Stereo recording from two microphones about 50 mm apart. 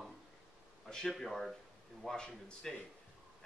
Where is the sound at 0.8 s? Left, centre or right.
Centre.